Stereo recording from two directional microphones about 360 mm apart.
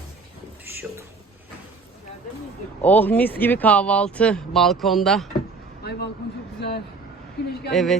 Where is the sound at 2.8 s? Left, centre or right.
Centre.